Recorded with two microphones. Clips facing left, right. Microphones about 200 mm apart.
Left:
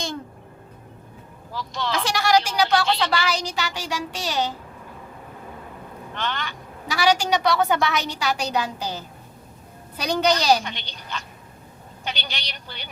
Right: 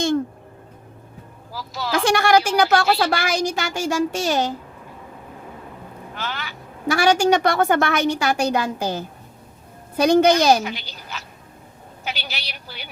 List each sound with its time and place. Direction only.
1.5 s speech: 5° right (ahead or behind)
2.0 s a woman's voice: 55° right (ahead or behind)
6.1 s speech: 5° right (ahead or behind)
6.8 s a woman's voice: 50° right (ahead or behind)
10.6 s a woman's voice: 5° right (ahead or behind)